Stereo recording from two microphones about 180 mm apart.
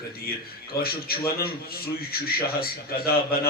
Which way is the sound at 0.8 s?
55° left (ahead or behind).